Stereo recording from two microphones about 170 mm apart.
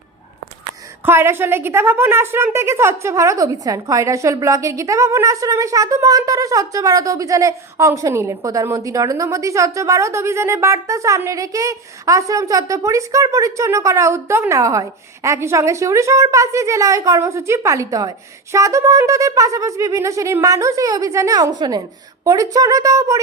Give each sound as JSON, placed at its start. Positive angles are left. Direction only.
{"t": 1.0, "sound": "a woman's voice", "side_deg": -15}
{"t": 18.5, "sound": "wind instrument", "side_deg": -20}